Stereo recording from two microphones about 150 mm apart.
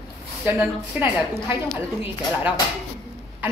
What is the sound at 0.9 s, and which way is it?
Speech, 10° right (ahead or behind).